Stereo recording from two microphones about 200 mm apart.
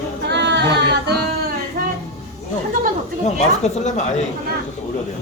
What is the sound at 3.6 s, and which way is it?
Speech, 35° left (ahead or behind).